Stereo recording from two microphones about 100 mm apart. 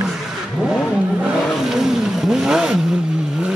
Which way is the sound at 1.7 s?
5° right (ahead or behind).